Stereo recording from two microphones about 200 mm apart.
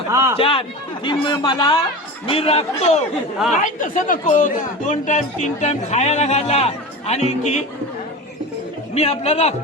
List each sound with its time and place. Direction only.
0.1 s speech: 15° right (ahead or behind)
0.3 s speech: 25° left (ahead or behind)
9.0 s speech: 30° left (ahead or behind)